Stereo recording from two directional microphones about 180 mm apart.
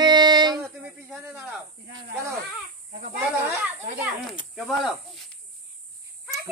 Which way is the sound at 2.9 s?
55° right (ahead or behind).